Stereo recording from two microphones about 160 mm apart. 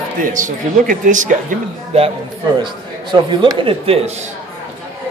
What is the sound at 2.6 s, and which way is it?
A man's voice, 30° right (ahead or behind).